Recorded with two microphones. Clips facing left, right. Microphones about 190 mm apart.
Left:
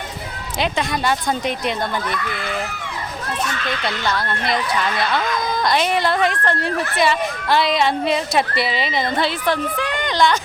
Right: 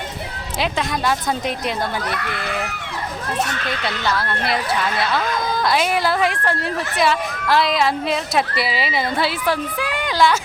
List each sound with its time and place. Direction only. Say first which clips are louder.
0.6 s speech: left 1 dB; centre (ahead or behind)
2.0 s speech: left 1 dB; 65° right (ahead or behind)
3.8 s speech: right 1 dB; centre (ahead or behind)